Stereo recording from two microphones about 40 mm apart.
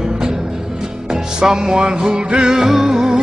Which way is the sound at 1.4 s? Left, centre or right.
Centre.